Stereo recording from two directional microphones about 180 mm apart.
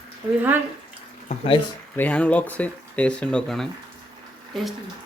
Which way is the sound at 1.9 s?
10° left (ahead or behind).